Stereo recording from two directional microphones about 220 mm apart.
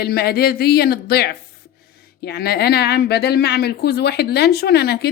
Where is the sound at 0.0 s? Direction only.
45° left (ahead or behind).